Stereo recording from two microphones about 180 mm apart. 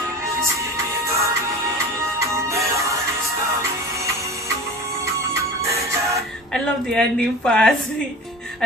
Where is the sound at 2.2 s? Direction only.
15° right (ahead or behind).